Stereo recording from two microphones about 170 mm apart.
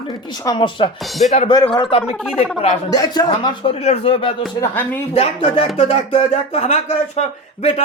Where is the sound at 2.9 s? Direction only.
25° left (ahead or behind).